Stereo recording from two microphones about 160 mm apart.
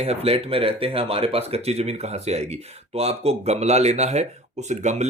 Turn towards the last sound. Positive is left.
turn(degrees=-45)  # may be behind; listen again after turning